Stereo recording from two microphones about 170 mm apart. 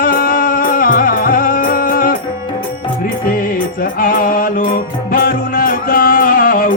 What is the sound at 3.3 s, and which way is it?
Music, 55° left (ahead or behind).